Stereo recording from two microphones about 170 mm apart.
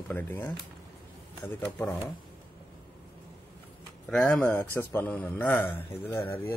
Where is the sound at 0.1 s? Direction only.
10° left (ahead or behind).